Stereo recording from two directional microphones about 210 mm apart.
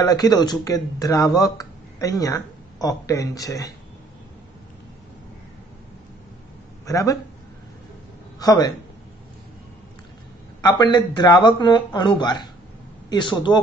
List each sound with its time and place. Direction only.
0.0 s speech: 20° left (ahead or behind)
6.9 s speech: 15° left (ahead or behind)
8.4 s speech: 15° left (ahead or behind)
10.6 s speech: 20° left (ahead or behind)